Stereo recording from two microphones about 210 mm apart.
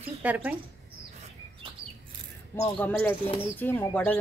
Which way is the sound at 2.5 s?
15° left (ahead or behind).